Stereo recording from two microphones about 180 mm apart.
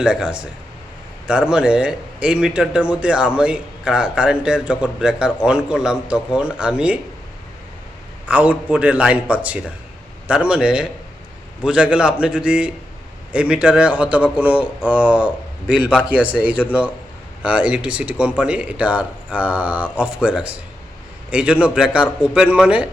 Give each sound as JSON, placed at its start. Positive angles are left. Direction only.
{"t": 0.0, "sound": "speech", "side_deg": -5}
{"t": 8.3, "sound": "a man's voice", "side_deg": -5}